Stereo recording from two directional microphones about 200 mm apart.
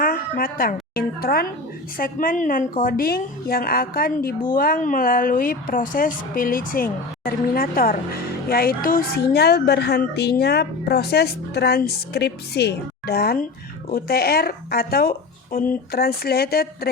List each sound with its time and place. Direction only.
0.0 s speech: 45° left (ahead or behind)